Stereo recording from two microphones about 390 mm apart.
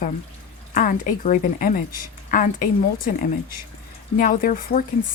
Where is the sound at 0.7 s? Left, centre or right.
Left.